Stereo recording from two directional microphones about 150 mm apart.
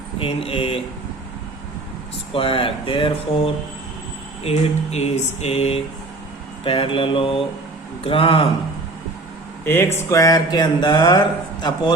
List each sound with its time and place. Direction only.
0.2 s speech: 40° left (ahead or behind)
2.3 s speech: 40° left (ahead or behind)
4.4 s a sound: 45° left (ahead or behind)
6.7 s speech: 40° left (ahead or behind)
9.6 s a man's voice: 15° left (ahead or behind)